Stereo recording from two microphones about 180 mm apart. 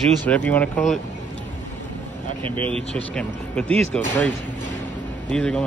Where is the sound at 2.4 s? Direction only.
30° right (ahead or behind).